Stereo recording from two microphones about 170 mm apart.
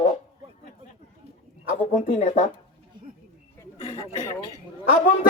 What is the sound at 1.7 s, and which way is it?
Speech, 45° left (ahead or behind).